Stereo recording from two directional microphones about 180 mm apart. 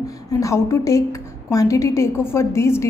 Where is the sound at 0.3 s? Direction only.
15° left (ahead or behind).